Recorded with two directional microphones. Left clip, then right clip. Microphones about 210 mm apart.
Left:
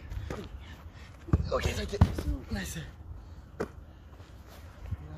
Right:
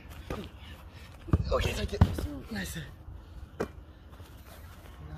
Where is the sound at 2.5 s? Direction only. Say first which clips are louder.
Right 1 dB; 5° left (ahead or behind).